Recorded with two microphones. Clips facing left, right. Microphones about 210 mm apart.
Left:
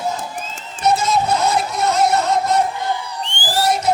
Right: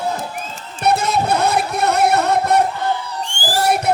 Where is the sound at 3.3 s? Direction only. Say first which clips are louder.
Right 1 dB; 45° right (ahead or behind).